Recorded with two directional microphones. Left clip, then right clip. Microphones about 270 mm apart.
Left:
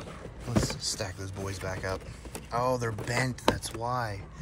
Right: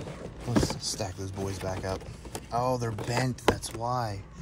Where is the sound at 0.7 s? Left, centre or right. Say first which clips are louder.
Even; right.